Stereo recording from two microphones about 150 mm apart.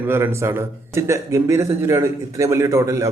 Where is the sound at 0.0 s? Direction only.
15° right (ahead or behind).